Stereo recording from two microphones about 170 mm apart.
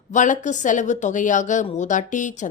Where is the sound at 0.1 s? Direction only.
45° left (ahead or behind).